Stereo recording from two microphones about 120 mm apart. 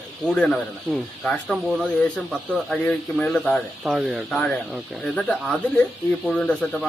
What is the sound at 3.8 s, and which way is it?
Speech, centre (ahead or behind).